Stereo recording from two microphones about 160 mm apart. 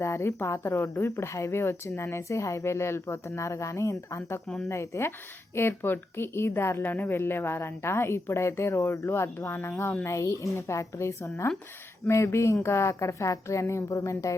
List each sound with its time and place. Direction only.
0.0 s a woman's voice: 15° left (ahead or behind)
4.4 s a woman's voice: centre (ahead or behind)
4.7 s a woman's voice: 15° left (ahead or behind)